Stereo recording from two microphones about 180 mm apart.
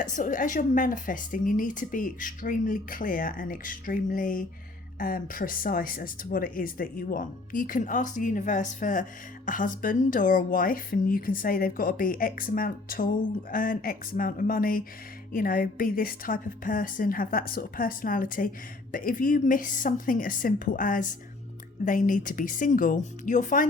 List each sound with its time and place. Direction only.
0.0 s a woman's voice: 45° left (ahead or behind)